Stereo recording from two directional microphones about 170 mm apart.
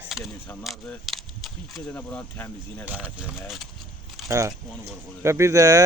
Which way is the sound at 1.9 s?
10° left (ahead or behind).